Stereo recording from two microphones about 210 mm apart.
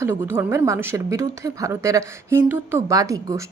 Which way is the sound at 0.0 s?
10° right (ahead or behind).